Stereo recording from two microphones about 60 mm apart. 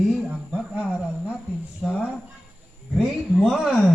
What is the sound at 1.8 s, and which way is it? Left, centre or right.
Speech, centre.